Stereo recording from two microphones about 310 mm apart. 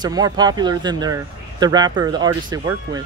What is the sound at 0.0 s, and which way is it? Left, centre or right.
Speech, centre.